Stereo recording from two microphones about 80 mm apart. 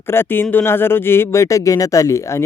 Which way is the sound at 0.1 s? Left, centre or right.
Left.